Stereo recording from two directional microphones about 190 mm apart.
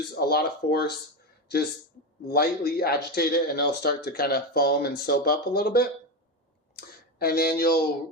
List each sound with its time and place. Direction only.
0.1 s speech: 55° left (ahead or behind)
2.3 s speech: 55° left (ahead or behind)